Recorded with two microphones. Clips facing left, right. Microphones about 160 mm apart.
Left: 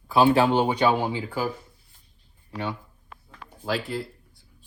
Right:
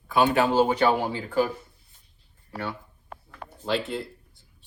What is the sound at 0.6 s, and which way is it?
Speech, 15° left (ahead or behind).